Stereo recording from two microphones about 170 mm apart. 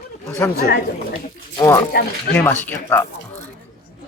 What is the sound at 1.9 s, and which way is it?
Speech, 65° left (ahead or behind).